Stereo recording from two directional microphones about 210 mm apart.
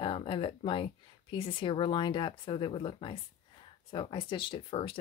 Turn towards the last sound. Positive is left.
turn(degrees=25)  # may be behind; listen again after turning